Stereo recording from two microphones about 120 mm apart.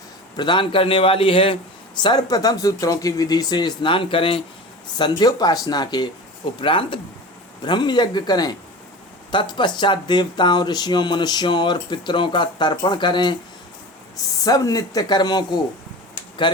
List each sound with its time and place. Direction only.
0.3 s a man's voice: 40° left (ahead or behind)
2.0 s speech: 35° left (ahead or behind)
4.9 s a man's voice: 40° left (ahead or behind)